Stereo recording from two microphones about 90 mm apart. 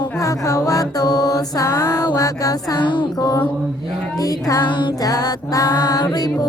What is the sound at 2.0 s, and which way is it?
Music, 45° left (ahead or behind).